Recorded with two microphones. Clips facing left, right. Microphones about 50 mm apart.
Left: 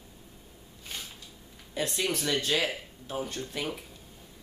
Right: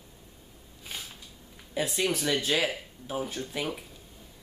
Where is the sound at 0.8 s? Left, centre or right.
Centre.